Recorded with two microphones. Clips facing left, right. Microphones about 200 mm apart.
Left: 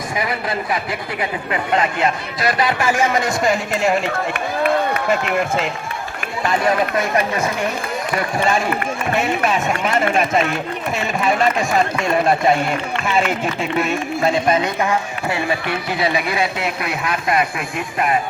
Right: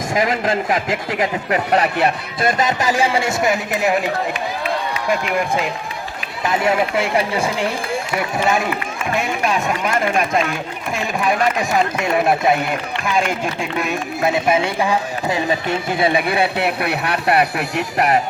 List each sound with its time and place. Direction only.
0.1 s speech: 45° right (ahead or behind)
2.0 s speech: 50° right (ahead or behind)
3.4 s speech: 5° right (ahead or behind)
4.6 s a sound: 55° left (ahead or behind)
6.7 s speech: 10° right (ahead or behind)
7.3 s speech: 30° right (ahead or behind)
9.1 s speech: centre (ahead or behind)
16.1 s speech: 60° right (ahead or behind)